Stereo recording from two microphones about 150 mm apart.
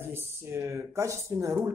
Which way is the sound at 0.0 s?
15° right (ahead or behind).